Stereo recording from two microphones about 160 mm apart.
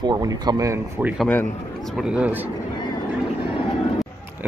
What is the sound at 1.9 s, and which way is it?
Speech, 5° right (ahead or behind).